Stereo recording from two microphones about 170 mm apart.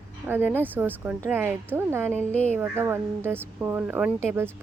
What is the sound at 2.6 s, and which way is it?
Speech, 10° right (ahead or behind).